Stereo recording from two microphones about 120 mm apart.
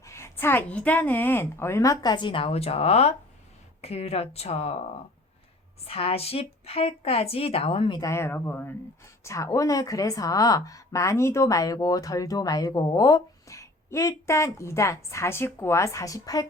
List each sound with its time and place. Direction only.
0.0 s a woman's voice: 25° left (ahead or behind); by 4.8 s 60° left (ahead or behind)
5.8 s speech: 55° left (ahead or behind); by 8.1 s 35° left (ahead or behind)
8.1 s a woman's voice: 20° left (ahead or behind)